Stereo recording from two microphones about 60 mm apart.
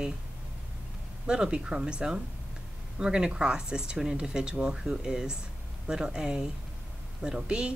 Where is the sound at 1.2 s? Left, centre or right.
Centre.